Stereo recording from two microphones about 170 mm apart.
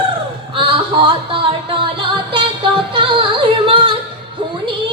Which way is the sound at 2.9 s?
30° right (ahead or behind).